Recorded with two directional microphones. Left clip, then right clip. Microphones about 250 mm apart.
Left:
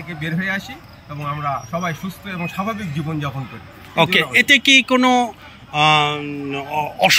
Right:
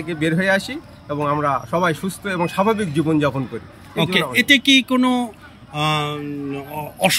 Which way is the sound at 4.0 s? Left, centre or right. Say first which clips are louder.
Left 4 dB; centre.